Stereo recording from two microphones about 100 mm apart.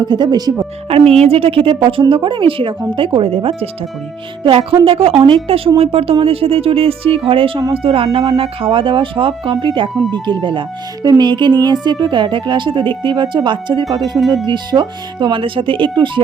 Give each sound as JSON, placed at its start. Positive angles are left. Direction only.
{"t": 0.0, "sound": "speech", "side_deg": -45}
{"t": 0.9, "sound": "a woman's voice", "side_deg": -90}
{"t": 14.2, "sound": "speech", "side_deg": 0}
{"t": 14.4, "sound": "a woman's voice", "side_deg": -50}